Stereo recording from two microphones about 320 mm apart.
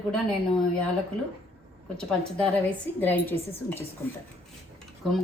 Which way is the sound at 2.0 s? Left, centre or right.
Centre.